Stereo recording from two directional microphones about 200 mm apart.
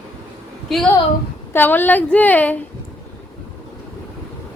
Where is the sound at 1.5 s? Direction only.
10° left (ahead or behind).